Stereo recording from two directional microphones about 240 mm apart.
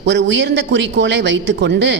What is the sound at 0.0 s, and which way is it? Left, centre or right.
Speech, right.